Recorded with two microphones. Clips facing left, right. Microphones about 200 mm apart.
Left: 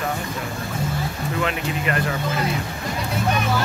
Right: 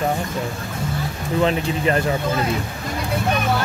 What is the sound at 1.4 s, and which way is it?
Speech, 30° right (ahead or behind).